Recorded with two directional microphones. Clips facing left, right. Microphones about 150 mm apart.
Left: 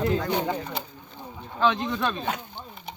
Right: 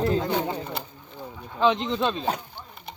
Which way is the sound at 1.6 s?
20° right (ahead or behind).